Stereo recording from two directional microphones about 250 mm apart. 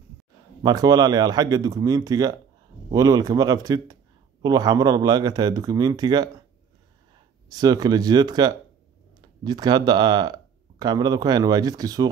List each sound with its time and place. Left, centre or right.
0.6 s a man's voice: centre
7.4 s a man's voice: centre